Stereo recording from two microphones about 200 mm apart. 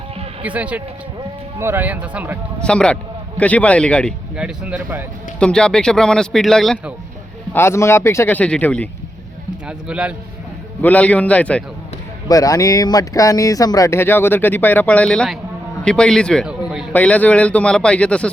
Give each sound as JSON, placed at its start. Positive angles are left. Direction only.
{"t": 0.4, "sound": "speech", "side_deg": -5}
{"t": 2.6, "sound": "speech", "side_deg": 5}
{"t": 4.4, "sound": "speech", "side_deg": -5}
{"t": 5.4, "sound": "speech", "side_deg": 5}
{"t": 7.5, "sound": "speech", "side_deg": 10}
{"t": 9.6, "sound": "speech", "side_deg": -5}
{"t": 10.8, "sound": "speech", "side_deg": 5}
{"t": 12.3, "sound": "a man's voice", "side_deg": 15}
{"t": 16.9, "sound": "speech", "side_deg": 5}